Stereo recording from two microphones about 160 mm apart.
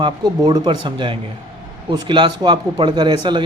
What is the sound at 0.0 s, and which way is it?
A man's voice, 25° right (ahead or behind).